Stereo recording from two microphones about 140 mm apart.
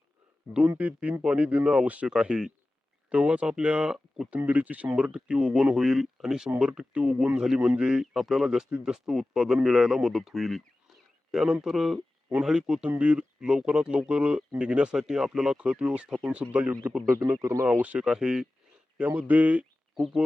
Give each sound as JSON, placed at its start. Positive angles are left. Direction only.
{"t": 0.7, "sound": "speech", "side_deg": -10}
{"t": 17.2, "sound": "speech", "side_deg": -25}
{"t": 17.7, "sound": "speech", "side_deg": -10}